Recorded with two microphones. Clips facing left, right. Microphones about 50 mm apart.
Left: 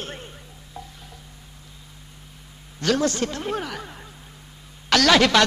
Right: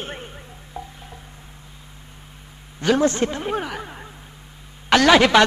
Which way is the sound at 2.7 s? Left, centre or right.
Centre.